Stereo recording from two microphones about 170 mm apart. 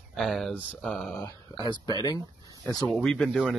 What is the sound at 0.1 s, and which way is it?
Speech, centre (ahead or behind).